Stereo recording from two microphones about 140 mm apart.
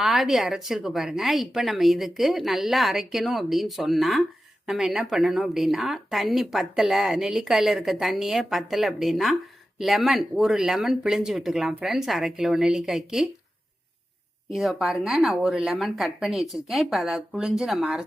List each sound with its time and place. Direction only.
0.0 s a woman's voice: centre (ahead or behind)
14.5 s a woman's voice: centre (ahead or behind)